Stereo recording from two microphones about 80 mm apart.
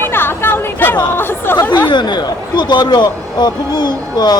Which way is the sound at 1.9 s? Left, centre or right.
Left.